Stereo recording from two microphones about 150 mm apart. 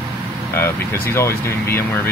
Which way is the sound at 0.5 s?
15° left (ahead or behind).